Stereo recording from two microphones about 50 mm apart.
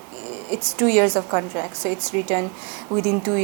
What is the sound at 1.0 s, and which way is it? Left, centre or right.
Speech, right.